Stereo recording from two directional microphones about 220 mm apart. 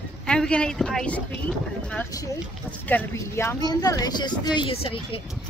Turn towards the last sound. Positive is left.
turn(degrees=25)  # may be behind; listen again after turning